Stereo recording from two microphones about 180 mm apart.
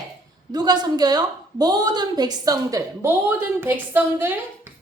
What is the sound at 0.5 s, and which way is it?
A woman's voice, 20° right (ahead or behind).